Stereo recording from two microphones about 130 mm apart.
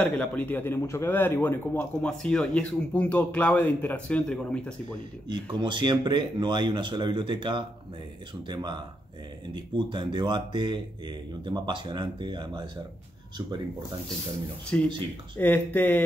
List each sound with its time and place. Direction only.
0.0 s speech: 10° left (ahead or behind)
5.3 s speech: 35° right (ahead or behind)
14.7 s speech: 15° left (ahead or behind)